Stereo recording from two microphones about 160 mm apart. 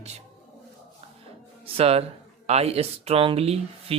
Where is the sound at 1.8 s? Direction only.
40° right (ahead or behind).